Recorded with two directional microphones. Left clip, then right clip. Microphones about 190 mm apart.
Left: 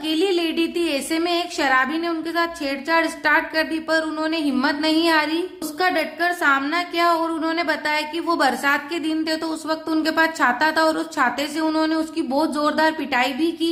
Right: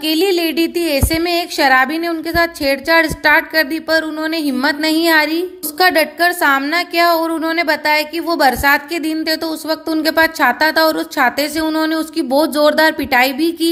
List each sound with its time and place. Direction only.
0.0 s a woman's voice: 25° right (ahead or behind)